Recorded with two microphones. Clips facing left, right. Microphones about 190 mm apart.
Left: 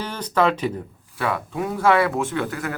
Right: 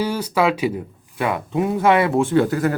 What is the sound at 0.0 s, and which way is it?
Speech, 10° right (ahead or behind).